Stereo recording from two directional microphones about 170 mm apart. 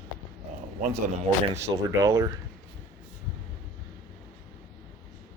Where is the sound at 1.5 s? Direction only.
20° right (ahead or behind).